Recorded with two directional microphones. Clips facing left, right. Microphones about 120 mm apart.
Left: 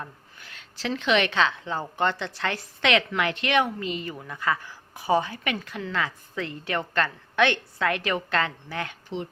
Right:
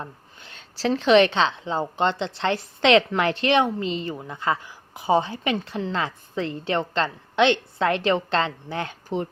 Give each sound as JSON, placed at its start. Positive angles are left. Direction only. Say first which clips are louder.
{"t": 0.0, "sound": "a woman's voice", "louder": "right 2 dB", "side_deg": -25}